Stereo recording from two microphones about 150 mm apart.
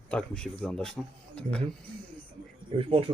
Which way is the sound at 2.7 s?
40° right (ahead or behind).